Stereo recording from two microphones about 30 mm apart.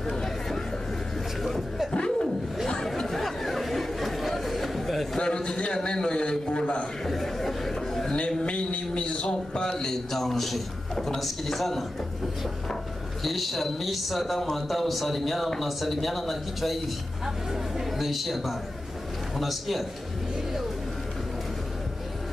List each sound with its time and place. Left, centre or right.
0.0 s chatter: centre
1.4 s chuckle: centre
1.9 s a sound: left
3.1 s chatter: centre
5.2 s a sound: left
5.9 s a man's voice: left
7.1 s a sound: centre
8.5 s a man's voice: left
9.5 s a man's voice: left
10.1 s a man's voice: centre
13.2 s speech: centre
17.9 s speech: centre